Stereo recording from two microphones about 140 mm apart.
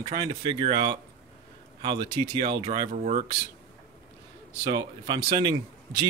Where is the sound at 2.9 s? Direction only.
60° right (ahead or behind).